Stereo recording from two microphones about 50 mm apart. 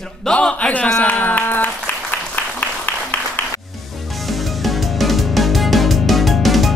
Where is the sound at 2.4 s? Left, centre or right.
Left.